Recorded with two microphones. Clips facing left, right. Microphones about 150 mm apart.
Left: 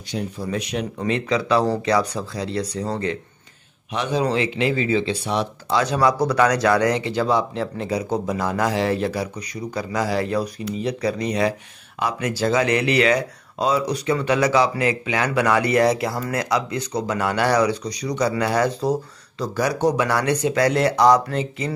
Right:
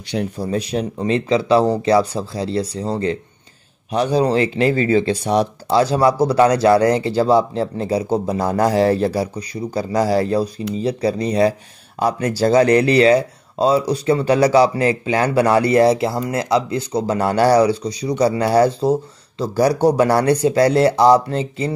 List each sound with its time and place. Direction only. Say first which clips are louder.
0.0 s speech: right 5 dB; 70° right (ahead or behind)
0.4 s speech: right 3 dB; 35° right (ahead or behind)